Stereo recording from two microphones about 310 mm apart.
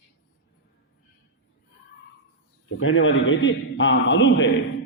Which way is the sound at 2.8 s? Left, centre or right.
Left.